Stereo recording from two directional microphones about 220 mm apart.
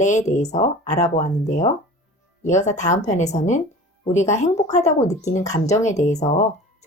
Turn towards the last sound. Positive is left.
turn(degrees=30)  # may be behind; listen again after turning